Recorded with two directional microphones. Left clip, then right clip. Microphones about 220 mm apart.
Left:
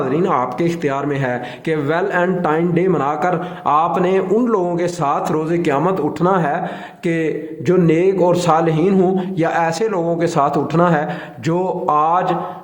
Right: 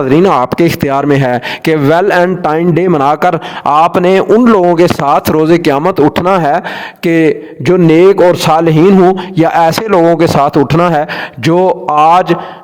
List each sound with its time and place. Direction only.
0.1 s speech: 45° right (ahead or behind)